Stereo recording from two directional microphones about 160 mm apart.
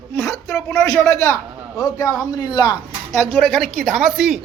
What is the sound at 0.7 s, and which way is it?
A man's voice, 20° left (ahead or behind).